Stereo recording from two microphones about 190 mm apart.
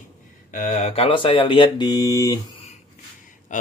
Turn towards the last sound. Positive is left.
turn(degrees=40)  # may be behind; listen again after turning